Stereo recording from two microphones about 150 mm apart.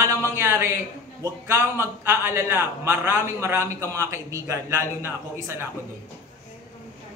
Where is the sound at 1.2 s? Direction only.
20° right (ahead or behind).